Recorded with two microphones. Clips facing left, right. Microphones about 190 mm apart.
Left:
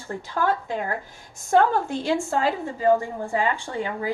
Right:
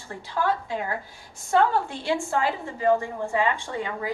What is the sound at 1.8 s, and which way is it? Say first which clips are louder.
A woman's voice: left 3 dB; 45° left (ahead or behind).